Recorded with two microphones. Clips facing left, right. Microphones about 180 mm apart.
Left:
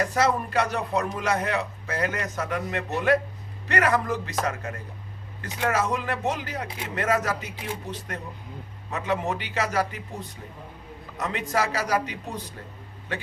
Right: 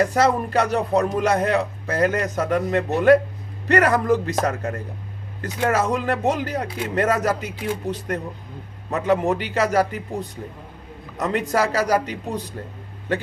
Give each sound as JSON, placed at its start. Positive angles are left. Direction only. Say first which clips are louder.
{"t": 0.1, "sound": "a man's voice", "louder": "right 5 dB", "side_deg": -40}